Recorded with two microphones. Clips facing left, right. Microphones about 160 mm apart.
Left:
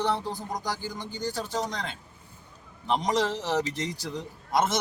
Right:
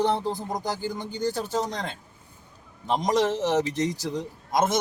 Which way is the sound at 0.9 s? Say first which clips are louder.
Right 4 dB; 50° right (ahead or behind).